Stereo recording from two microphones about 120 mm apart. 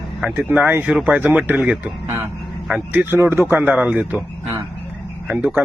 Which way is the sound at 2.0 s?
20° right (ahead or behind).